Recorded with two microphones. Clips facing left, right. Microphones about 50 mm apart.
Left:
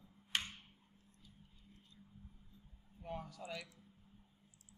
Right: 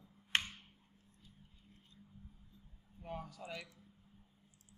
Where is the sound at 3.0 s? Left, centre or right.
Centre.